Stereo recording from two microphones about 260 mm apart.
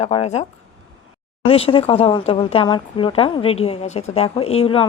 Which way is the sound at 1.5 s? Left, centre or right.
Left.